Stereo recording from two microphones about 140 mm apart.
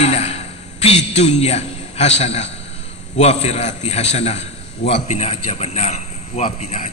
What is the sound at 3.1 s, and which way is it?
A man's voice, 50° left (ahead or behind).